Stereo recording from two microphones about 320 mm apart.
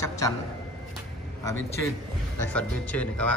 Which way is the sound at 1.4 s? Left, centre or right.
Centre.